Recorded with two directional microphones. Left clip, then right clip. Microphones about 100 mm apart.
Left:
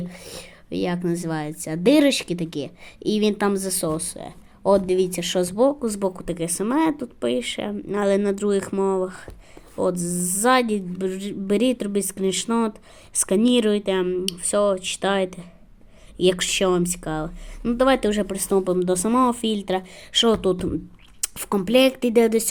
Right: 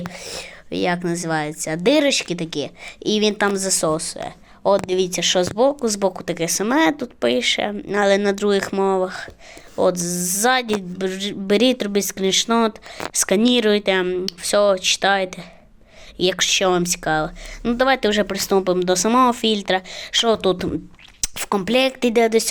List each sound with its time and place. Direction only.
0.1 s a woman's voice: 50° left (ahead or behind)